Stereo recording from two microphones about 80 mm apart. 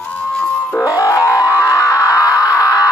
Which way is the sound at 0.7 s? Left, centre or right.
Left.